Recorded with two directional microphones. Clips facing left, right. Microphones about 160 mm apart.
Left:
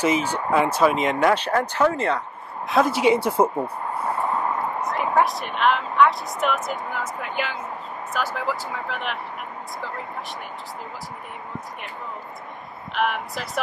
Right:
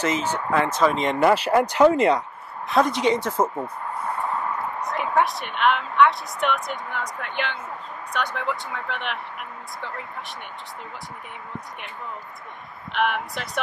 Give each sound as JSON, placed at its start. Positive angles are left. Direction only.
{"t": 0.0, "sound": "a woman's voice", "side_deg": 10}
{"t": 2.7, "sound": "speech", "side_deg": 5}
{"t": 4.0, "sound": "a sound", "side_deg": 20}
{"t": 4.8, "sound": "a woman's voice", "side_deg": 0}
{"t": 12.9, "sound": "a woman's voice", "side_deg": 0}